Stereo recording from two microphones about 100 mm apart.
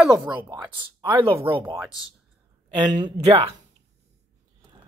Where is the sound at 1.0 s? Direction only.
60° right (ahead or behind).